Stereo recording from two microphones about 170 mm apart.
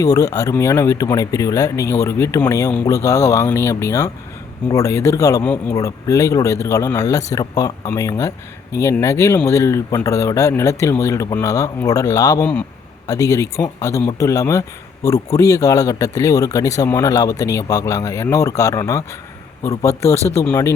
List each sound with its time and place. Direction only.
0.0 s speech: 20° left (ahead or behind)